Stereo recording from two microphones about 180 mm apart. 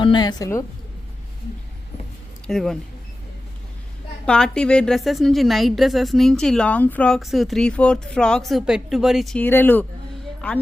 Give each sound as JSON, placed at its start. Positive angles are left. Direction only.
{"t": 0.0, "sound": "a woman's voice", "side_deg": 25}
{"t": 2.5, "sound": "a woman's voice", "side_deg": 0}
{"t": 4.3, "sound": "a woman's voice", "side_deg": 5}